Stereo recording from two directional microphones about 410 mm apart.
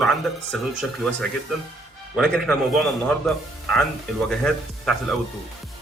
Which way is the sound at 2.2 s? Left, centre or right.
Centre.